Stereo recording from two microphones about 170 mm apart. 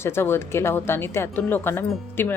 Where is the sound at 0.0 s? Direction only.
15° left (ahead or behind).